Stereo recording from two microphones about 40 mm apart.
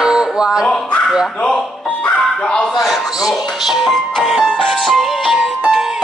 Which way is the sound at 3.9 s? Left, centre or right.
Centre.